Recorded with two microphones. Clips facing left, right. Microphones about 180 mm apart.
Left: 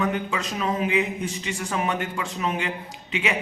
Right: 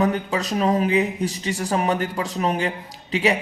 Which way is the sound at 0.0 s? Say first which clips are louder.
Right 4 dB; 35° right (ahead or behind).